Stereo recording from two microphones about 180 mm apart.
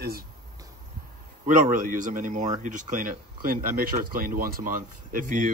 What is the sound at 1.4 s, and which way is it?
Speech, 50° right (ahead or behind).